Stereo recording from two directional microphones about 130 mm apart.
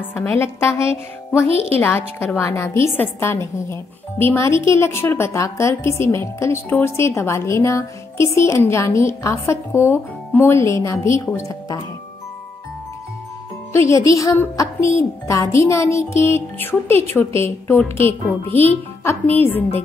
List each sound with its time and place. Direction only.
0.4 s a woman's voice: 20° left (ahead or behind)
13.7 s a woman's voice: 25° left (ahead or behind)